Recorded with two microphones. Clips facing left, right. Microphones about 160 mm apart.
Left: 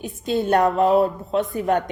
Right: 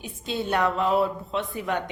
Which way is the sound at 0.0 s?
45° left (ahead or behind).